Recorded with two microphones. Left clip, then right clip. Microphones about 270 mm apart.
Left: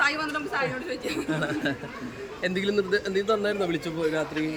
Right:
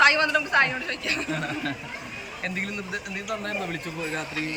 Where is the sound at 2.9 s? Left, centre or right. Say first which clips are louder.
Left 7 dB; centre.